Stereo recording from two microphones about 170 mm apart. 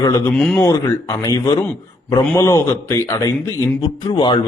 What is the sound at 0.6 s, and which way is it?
A man's voice, 20° left (ahead or behind).